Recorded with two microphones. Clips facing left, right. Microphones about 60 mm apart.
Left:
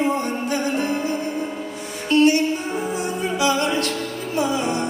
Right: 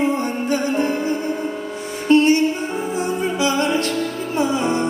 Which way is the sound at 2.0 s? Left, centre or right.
Right.